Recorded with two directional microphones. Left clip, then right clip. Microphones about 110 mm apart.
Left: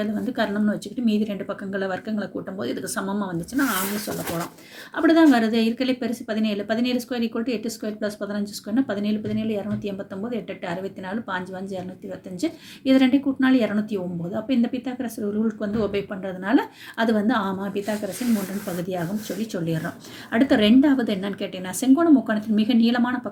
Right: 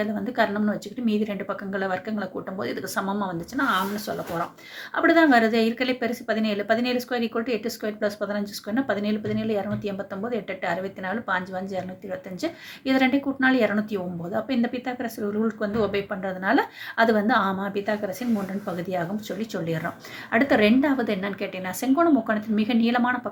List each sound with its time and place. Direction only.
0.0 s speech: 30° left (ahead or behind)
4.9 s speech: 30° left (ahead or behind)